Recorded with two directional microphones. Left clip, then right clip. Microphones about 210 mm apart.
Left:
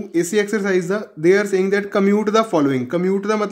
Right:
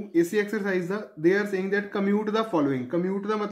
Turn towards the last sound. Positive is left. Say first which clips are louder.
# left 8 dB
turn(degrees=45)  # may be behind; listen again after turning